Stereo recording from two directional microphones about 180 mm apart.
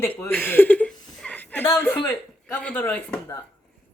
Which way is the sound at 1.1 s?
5° left (ahead or behind).